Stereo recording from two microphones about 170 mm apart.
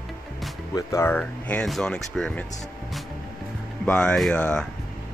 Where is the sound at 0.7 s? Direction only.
15° left (ahead or behind).